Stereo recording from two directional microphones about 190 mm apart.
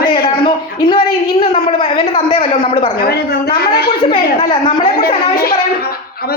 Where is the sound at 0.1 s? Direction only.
25° left (ahead or behind).